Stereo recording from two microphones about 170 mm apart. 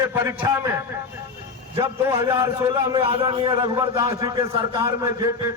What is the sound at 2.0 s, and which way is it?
A man's voice, 20° right (ahead or behind).